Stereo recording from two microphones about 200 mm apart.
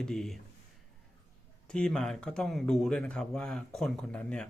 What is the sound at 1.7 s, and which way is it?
Speech, 5° left (ahead or behind).